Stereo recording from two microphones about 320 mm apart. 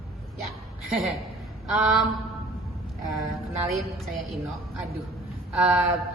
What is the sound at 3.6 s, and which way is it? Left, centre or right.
Speech, centre.